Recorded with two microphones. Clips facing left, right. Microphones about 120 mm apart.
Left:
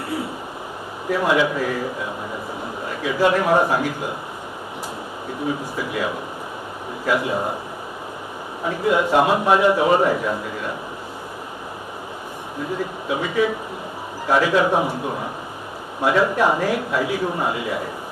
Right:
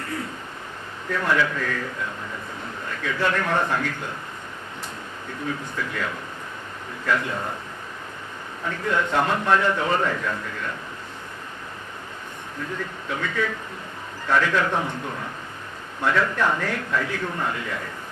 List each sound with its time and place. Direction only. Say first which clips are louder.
1.1 s a man's voice: left 4 dB; 15° left (ahead or behind)
5.5 s a man's voice: left 4 dB; 15° left (ahead or behind)
8.6 s a man's voice: left 6 dB; 10° left (ahead or behind)
12.5 s a man's voice: left 6 dB; 15° left (ahead or behind)